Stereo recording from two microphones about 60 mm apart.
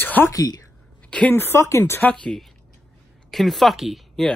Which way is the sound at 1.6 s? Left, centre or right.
Left.